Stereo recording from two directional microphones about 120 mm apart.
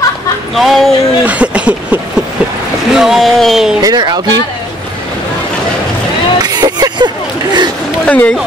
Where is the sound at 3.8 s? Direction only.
35° right (ahead or behind).